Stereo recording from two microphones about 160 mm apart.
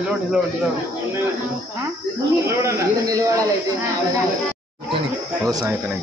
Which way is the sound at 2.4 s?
20° right (ahead or behind).